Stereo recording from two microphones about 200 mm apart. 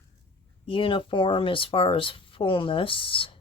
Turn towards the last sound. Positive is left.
turn(degrees=25)  # may be behind; listen again after turning